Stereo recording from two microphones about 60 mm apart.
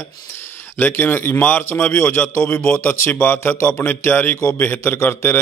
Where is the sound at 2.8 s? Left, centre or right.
Left.